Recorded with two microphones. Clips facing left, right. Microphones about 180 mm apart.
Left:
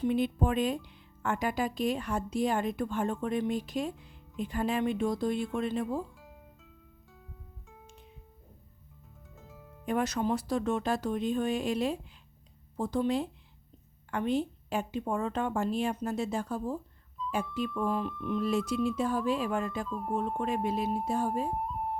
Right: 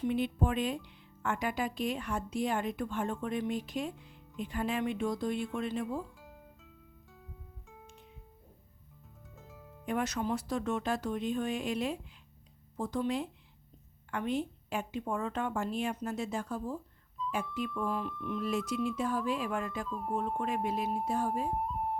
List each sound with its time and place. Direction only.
0.0 s speech: 40° left (ahead or behind)
6.1 s music: centre (ahead or behind)
9.3 s music: centre (ahead or behind)
9.8 s speech: 35° left (ahead or behind)
19.9 s speech: centre (ahead or behind)
20.7 s speech: 30° left (ahead or behind)
21.5 s music: centre (ahead or behind)